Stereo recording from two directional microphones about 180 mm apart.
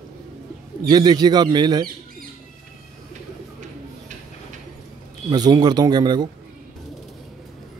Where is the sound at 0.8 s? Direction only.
25° right (ahead or behind).